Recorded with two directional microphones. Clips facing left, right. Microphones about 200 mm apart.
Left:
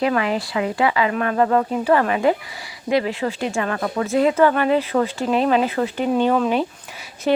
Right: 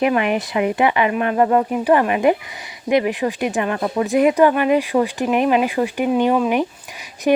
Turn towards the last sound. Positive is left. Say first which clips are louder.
# right 3 dB
turn(degrees=-15)  # may be behind; listen again after turning